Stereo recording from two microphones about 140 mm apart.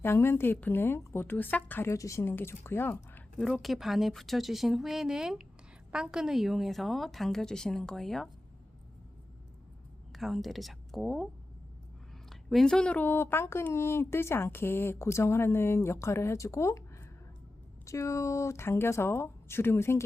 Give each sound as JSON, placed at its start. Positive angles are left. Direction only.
{"t": 0.0, "sound": "speech", "side_deg": 15}
{"t": 3.3, "sound": "a woman's voice", "side_deg": 0}
{"t": 10.1, "sound": "a woman's voice", "side_deg": 0}
{"t": 12.3, "sound": "speech", "side_deg": 0}